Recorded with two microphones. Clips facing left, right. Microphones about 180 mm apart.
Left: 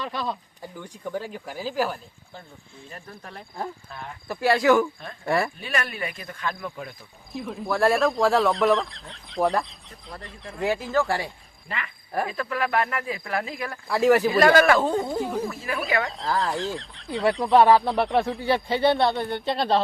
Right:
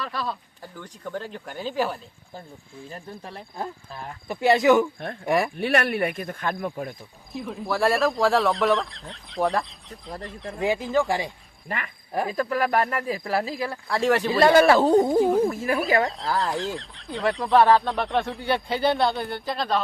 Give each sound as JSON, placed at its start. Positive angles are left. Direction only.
{"t": 0.0, "sound": "speech", "side_deg": 20}
{"t": 0.6, "sound": "speech", "side_deg": 10}
{"t": 2.9, "sound": "speech", "side_deg": -30}
{"t": 5.5, "sound": "speech", "side_deg": -65}
{"t": 7.3, "sound": "speech", "side_deg": 0}
{"t": 12.3, "sound": "speech", "side_deg": -40}
{"t": 13.8, "sound": "speech", "side_deg": 5}
{"t": 14.3, "sound": "speech", "side_deg": -25}
{"t": 15.2, "sound": "speech", "side_deg": 0}
{"t": 15.4, "sound": "speech", "side_deg": -45}
{"t": 16.0, "sound": "speech", "side_deg": 0}
{"t": 19.3, "sound": "speech", "side_deg": 25}